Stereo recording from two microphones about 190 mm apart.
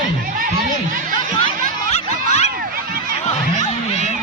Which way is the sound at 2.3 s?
35° left (ahead or behind).